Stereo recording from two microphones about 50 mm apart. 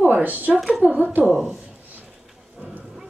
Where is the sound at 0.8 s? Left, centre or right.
Right.